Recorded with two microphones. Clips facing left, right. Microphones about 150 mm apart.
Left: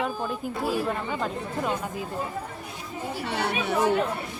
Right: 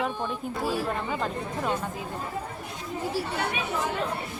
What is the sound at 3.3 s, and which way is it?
Speech, 75° left (ahead or behind).